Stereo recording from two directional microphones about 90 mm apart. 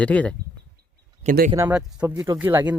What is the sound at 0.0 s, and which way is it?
Speech, 15° left (ahead or behind).